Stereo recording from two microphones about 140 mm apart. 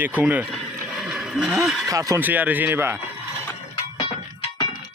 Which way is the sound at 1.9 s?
25° right (ahead or behind).